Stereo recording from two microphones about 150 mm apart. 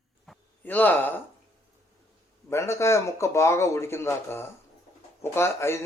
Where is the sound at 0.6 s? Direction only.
10° left (ahead or behind).